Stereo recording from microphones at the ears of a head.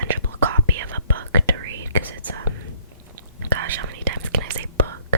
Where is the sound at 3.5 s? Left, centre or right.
Right.